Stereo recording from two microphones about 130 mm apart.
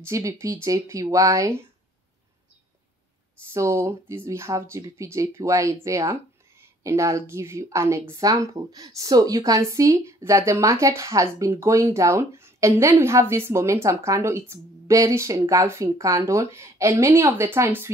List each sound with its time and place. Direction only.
0.0 s speech: 25° right (ahead or behind)
3.5 s speech: 20° right (ahead or behind)